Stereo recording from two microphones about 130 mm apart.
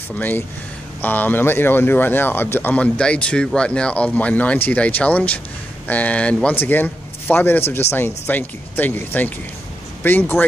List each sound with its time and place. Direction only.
1.0 s speech: 15° left (ahead or behind)